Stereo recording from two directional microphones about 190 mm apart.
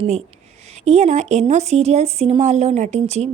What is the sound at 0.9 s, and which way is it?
Speech, 35° right (ahead or behind).